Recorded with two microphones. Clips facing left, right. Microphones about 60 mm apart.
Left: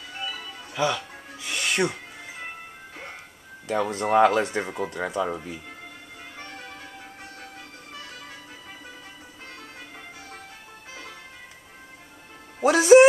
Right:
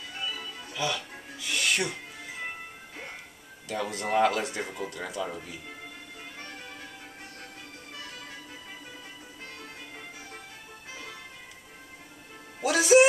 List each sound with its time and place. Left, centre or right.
0.2 s music: centre
0.7 s music: left
3.6 s speech: left
5.3 s speech: left
6.3 s music: centre
12.6 s music: left